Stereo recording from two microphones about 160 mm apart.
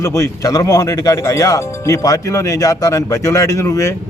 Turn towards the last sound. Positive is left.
turn(degrees=20)  # may be behind; listen again after turning